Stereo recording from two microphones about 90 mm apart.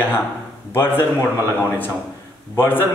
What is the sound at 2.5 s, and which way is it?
Speech, 20° left (ahead or behind).